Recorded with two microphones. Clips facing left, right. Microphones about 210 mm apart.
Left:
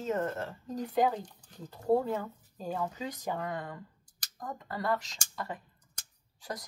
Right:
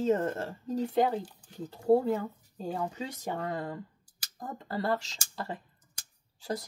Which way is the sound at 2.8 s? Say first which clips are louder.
Even; 25° right (ahead or behind).